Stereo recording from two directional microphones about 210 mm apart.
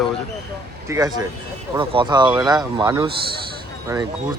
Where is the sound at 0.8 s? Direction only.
15° right (ahead or behind).